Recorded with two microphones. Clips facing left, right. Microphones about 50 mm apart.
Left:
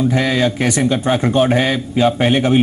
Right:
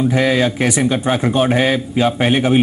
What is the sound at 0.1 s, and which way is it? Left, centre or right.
Speech, centre.